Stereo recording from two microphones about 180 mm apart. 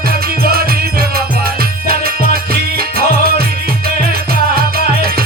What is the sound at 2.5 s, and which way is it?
Music, 55° right (ahead or behind).